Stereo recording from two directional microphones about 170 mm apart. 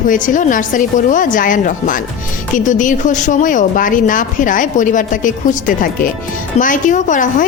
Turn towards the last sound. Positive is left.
turn(degrees=50)  # may be behind; listen again after turning